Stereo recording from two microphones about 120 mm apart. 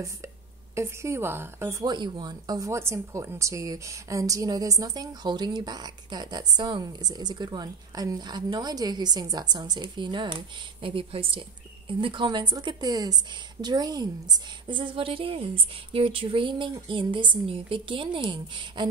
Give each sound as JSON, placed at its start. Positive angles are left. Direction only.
{"t": 0.7, "sound": "a woman's voice", "side_deg": -25}
{"t": 1.9, "sound": "a woman's voice", "side_deg": -35}